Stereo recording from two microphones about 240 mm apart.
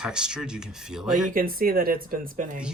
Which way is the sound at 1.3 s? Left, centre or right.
Right.